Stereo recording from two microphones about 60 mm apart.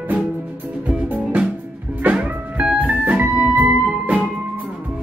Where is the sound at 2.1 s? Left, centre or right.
Right.